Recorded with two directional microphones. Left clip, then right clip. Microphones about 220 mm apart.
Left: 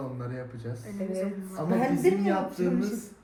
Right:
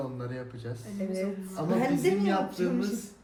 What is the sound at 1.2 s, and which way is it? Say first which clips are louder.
Speech: left 1 dB; centre (ahead or behind).